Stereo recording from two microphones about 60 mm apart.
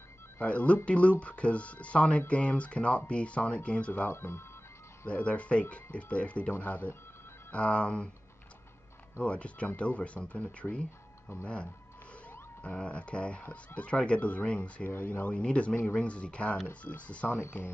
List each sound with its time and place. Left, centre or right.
0.4 s speech: left
4.1 s speech: left
5.0 s speech: left
9.2 s speech: centre